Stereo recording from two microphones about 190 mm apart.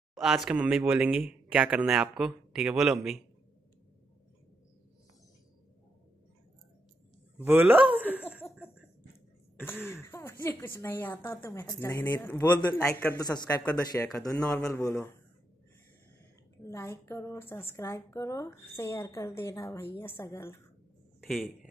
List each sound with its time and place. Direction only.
0.1 s speech: centre (ahead or behind)
7.3 s speech: 10° right (ahead or behind)
10.0 s a woman's voice: 10° left (ahead or behind)
16.6 s a woman's voice: 15° left (ahead or behind)